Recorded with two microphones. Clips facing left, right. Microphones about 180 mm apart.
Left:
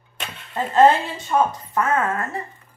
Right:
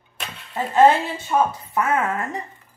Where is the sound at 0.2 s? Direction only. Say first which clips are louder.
Left 1 dB; 10° right (ahead or behind).